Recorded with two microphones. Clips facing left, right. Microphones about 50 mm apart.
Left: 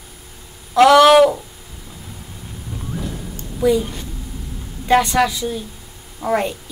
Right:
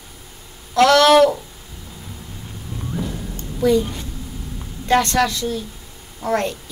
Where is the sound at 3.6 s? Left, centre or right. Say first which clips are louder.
Even; centre.